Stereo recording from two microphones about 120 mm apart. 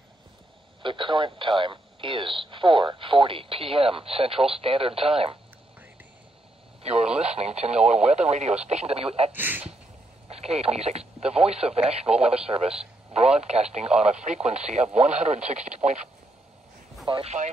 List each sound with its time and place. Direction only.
0.8 s speech: 45° right (ahead or behind)
6.8 s radio: 60° right (ahead or behind)
7.2 s speech: 60° right (ahead or behind)
9.3 s speech: 15° right (ahead or behind)
10.3 s speech: 60° right (ahead or behind)
17.1 s speech: 55° right (ahead or behind)